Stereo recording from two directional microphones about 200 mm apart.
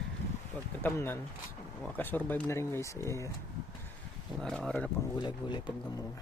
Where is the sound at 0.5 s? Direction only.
10° left (ahead or behind).